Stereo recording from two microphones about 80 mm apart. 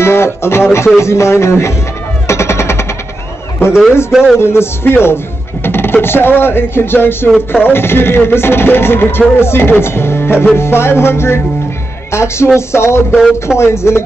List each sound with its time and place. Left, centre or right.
0.0 s speech: left
1.0 s music: left
2.2 s machine gun: left
4.1 s speech: centre
4.4 s speech: left
7.3 s speech: centre
7.7 s speech: left
9.4 s music: left
13.1 s speech: centre
13.6 s music: left